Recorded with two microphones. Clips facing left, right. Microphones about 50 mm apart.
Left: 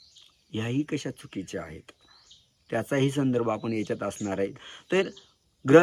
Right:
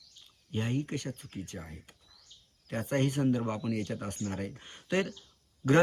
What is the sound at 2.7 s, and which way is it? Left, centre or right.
Speech, left.